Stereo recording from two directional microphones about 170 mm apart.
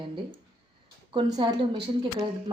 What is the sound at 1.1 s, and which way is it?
Speech, 30° right (ahead or behind).